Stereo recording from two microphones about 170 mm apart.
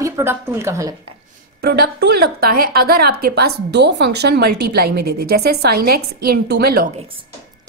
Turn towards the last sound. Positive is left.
turn(degrees=-65)  # may be behind; listen again after turning